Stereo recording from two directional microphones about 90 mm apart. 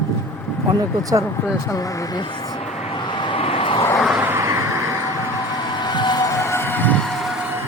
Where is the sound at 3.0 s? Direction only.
60° left (ahead or behind); by 3.9 s 85° left.